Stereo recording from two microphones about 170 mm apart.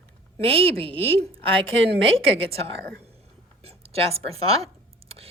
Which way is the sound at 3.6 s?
35° right (ahead or behind).